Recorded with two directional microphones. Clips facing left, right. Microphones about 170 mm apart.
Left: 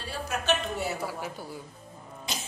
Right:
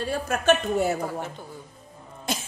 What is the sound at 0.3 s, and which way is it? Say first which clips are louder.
Speech: right 6 dB; 50° right (ahead or behind).